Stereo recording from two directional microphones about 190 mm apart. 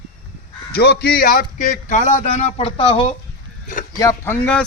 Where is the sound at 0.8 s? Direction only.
55° left (ahead or behind); by 3.1 s 30° left (ahead or behind).